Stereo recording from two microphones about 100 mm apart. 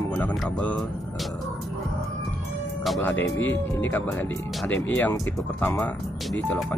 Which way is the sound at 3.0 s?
20° left (ahead or behind).